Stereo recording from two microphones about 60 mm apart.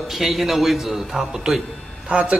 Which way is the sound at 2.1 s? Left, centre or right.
Centre.